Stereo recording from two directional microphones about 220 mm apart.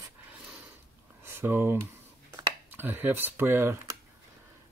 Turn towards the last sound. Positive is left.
turn(degrees=-10)  # may be behind; listen again after turning